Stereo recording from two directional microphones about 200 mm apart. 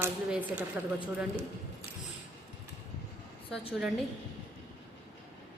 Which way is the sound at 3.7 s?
Centre (ahead or behind).